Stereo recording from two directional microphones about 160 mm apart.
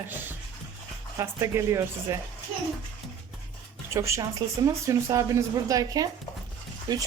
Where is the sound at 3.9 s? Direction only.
20° right (ahead or behind).